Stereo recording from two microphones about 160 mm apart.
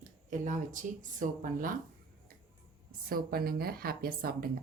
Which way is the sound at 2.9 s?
65° right (ahead or behind).